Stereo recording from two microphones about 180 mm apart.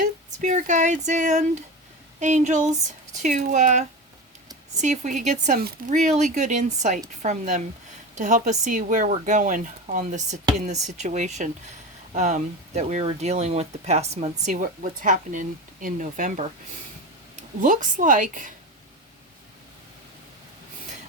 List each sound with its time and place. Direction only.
0.0 s speech: 45° right (ahead or behind)
14.5 s speech: 50° right (ahead or behind)
17.6 s speech: 45° right (ahead or behind)